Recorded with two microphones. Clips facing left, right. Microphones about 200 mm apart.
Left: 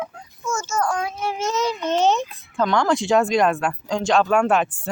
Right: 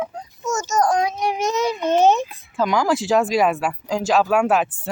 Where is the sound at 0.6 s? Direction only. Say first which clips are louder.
Right 5 dB; 40° right (ahead or behind).